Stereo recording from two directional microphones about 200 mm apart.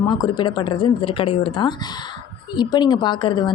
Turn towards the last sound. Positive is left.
turn(degrees=20)  # may be behind; listen again after turning